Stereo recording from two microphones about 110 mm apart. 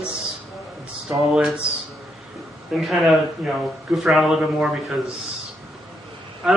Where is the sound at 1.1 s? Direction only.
Centre (ahead or behind).